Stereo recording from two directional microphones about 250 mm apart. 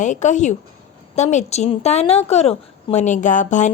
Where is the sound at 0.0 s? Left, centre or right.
Left.